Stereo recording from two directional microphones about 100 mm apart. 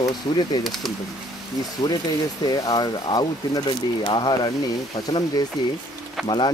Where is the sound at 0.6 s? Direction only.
Centre (ahead or behind).